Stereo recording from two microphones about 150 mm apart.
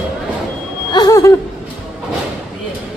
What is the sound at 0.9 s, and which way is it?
Speech, 25° left (ahead or behind).